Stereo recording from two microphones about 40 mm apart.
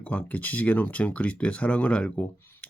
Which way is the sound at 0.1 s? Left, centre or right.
Left.